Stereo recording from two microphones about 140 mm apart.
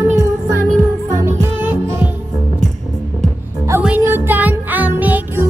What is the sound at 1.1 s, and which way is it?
Music, 20° right (ahead or behind).